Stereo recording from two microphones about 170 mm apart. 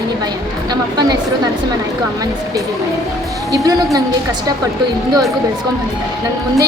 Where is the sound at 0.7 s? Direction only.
25° right (ahead or behind).